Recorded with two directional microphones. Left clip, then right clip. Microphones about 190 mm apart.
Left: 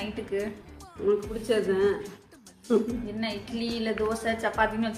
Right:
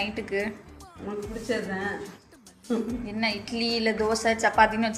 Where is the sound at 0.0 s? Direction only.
15° right (ahead or behind).